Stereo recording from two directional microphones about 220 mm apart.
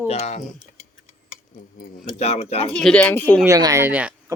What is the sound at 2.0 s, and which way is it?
Speech, 30° left (ahead or behind).